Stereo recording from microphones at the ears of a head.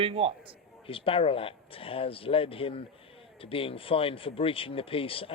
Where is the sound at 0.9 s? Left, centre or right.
Left.